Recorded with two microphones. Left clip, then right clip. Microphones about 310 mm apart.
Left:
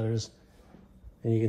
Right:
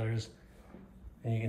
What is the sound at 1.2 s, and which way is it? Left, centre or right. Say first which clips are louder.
Speech: left 11 dB; left.